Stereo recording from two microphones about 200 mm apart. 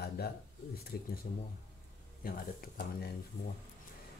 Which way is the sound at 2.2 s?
50° left (ahead or behind).